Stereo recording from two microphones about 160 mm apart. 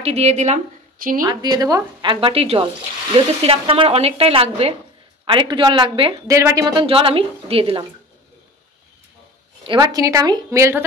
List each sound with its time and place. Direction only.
0.0 s a woman's voice: 40° right (ahead or behind)
1.2 s a woman's voice: 25° right (ahead or behind)
6.2 s speech: 20° right (ahead or behind); by 7.8 s 35° right (ahead or behind)
9.7 s a woman's voice: 25° right (ahead or behind)